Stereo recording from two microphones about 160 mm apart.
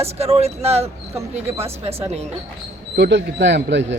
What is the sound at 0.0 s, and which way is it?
Speech, 40° right (ahead or behind).